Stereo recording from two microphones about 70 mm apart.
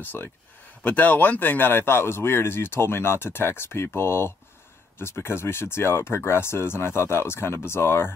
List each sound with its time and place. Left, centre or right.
0.0 s speech: left